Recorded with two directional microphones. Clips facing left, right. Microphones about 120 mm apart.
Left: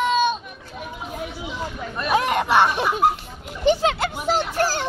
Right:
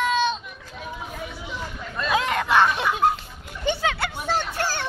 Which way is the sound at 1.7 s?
20° left (ahead or behind).